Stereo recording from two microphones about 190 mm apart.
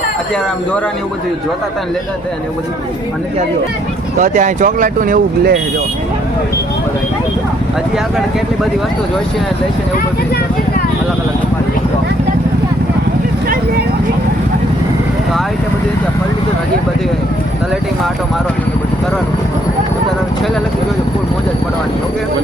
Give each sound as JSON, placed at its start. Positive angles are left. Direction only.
{"t": 4.2, "sound": "speech", "side_deg": -45}